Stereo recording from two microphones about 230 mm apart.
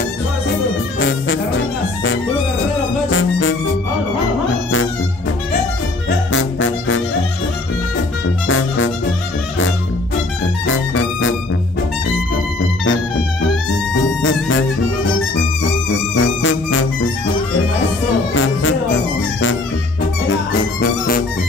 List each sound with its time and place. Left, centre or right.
0.9 s music: left
3.1 s music: left
6.0 s music: left
8.5 s music: left
10.7 s music: left
16.2 s music: left
18.3 s music: left